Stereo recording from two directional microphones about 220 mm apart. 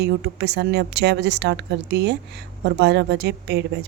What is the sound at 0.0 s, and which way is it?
Speech, 50° right (ahead or behind).